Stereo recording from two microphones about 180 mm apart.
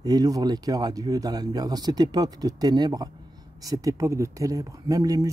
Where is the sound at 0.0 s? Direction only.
20° right (ahead or behind).